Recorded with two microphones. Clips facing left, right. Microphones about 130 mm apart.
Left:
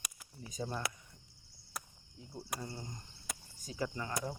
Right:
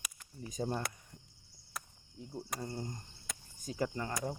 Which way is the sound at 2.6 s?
45° right (ahead or behind).